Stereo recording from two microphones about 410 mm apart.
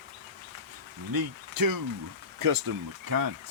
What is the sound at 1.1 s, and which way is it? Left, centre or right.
Speech, right.